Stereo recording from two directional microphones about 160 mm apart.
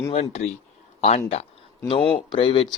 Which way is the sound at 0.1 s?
45° left (ahead or behind).